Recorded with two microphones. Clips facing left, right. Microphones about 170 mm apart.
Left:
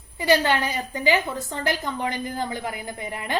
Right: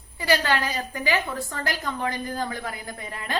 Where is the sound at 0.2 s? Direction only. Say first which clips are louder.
Left 3 dB; 20° left (ahead or behind).